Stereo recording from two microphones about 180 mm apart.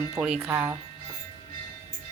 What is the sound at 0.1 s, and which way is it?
Speech, 10° right (ahead or behind).